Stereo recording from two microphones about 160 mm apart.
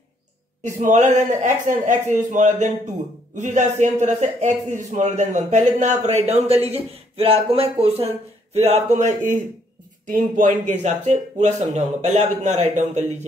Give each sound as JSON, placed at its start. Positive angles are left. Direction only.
{"t": 0.6, "sound": "speech", "side_deg": -50}
{"t": 10.8, "sound": "speech", "side_deg": -45}